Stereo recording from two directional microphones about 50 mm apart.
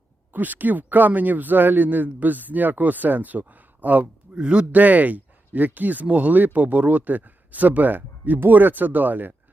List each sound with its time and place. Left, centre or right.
0.3 s a man's voice: right